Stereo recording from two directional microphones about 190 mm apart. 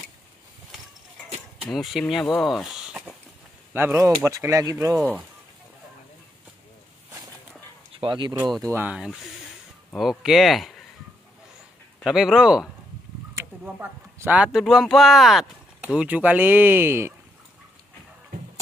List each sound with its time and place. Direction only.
1.6 s speech: centre (ahead or behind)
2.4 s a sound: centre (ahead or behind)
3.7 s speech: 10° right (ahead or behind)
7.9 s speech: 25° right (ahead or behind)
8.5 s speech: centre (ahead or behind)
12.0 s speech: 5° right (ahead or behind)
13.3 s speech: 15° right (ahead or behind)